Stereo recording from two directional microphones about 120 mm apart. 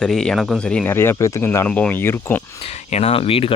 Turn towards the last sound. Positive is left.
turn(degrees=50)  # may be behind; listen again after turning